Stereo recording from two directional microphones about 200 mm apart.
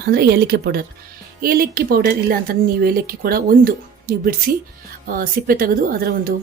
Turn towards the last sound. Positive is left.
turn(degrees=-45)  # may be behind; listen again after turning